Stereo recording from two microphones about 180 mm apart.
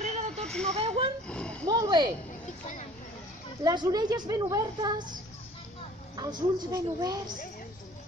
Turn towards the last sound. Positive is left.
turn(degrees=-20)  # may be behind; listen again after turning